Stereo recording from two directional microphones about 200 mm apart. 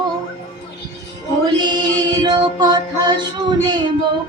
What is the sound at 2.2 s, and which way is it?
Female singing, 20° right (ahead or behind).